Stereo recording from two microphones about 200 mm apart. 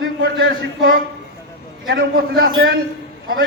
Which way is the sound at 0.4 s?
50° right (ahead or behind).